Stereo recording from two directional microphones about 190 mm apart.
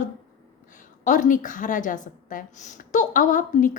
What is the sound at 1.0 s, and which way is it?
Speech, 40° left (ahead or behind).